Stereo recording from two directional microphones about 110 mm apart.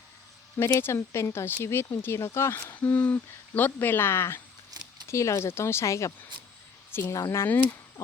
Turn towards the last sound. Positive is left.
turn(degrees=20)  # may be behind; listen again after turning